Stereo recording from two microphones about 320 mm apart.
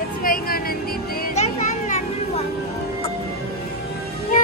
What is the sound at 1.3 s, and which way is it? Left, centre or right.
Children playing, left.